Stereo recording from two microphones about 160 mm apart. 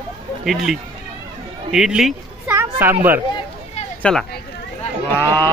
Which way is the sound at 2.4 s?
15° right (ahead or behind).